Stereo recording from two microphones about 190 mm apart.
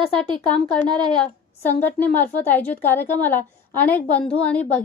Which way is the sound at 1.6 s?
10° left (ahead or behind).